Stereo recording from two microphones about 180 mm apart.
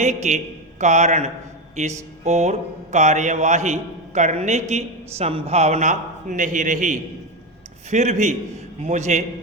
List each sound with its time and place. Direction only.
0.0 s mantra: 40° right (ahead or behind)